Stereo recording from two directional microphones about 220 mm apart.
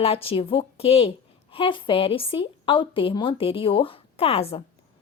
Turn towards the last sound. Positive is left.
turn(degrees=25)  # may be behind; listen again after turning